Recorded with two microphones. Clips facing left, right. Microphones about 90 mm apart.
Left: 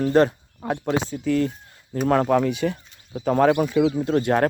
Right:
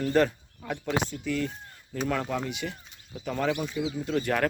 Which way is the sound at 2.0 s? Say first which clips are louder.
Left 11 dB; 50° left (ahead or behind).